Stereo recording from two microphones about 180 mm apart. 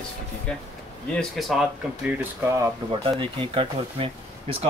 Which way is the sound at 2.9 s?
30° right (ahead or behind).